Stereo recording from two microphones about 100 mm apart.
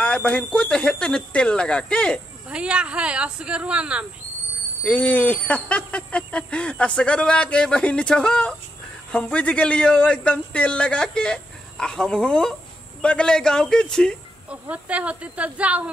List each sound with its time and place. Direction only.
0.0 s speech: 10° left (ahead or behind)
2.5 s speech: 10° right (ahead or behind)
4.8 s speech: 15° left (ahead or behind)
14.5 s speech: 15° right (ahead or behind)